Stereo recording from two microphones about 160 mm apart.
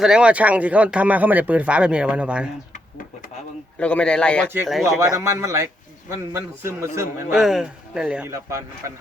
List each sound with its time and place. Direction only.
0.0 s speech: 5° right (ahead or behind)
3.8 s a man's voice: 10° left (ahead or behind)
4.9 s speech: 20° right (ahead or behind)
7.3 s speech: 5° right (ahead or behind)
8.3 s speech: 20° right (ahead or behind)